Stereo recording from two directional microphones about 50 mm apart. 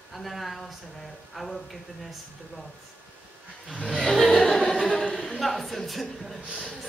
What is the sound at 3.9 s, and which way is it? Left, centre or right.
Music, centre.